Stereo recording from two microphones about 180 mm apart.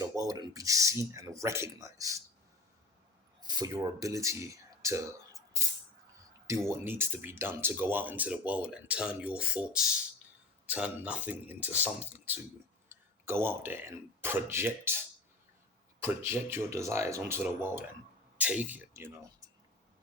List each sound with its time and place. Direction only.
0.0 s speech: 20° right (ahead or behind)
3.4 s speech: 20° right (ahead or behind)